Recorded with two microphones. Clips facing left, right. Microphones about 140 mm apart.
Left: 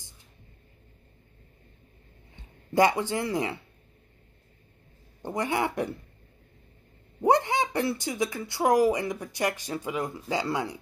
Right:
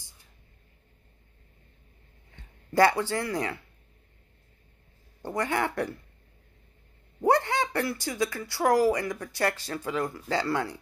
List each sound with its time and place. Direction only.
2.3 s speech: 20° left (ahead or behind)
5.2 s speech: 20° left (ahead or behind)
7.2 s speech: 20° left (ahead or behind)